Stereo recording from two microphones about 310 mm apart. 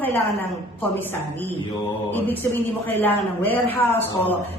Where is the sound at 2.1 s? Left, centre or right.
Centre.